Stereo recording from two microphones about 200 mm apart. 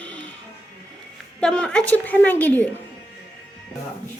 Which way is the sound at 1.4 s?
5° left (ahead or behind).